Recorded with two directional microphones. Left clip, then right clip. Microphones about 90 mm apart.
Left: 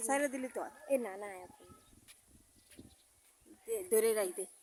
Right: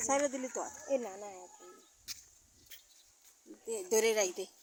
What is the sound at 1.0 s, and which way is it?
Speech, 30° left (ahead or behind).